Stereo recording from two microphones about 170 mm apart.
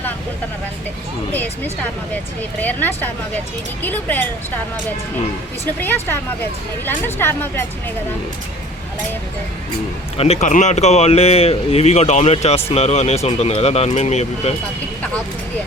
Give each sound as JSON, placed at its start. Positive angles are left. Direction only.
{"t": 2.6, "sound": "speech", "side_deg": 10}
{"t": 5.8, "sound": "speech", "side_deg": 10}
{"t": 10.2, "sound": "speech", "side_deg": 35}